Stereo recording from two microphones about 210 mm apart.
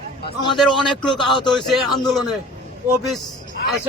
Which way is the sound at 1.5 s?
Centre (ahead or behind).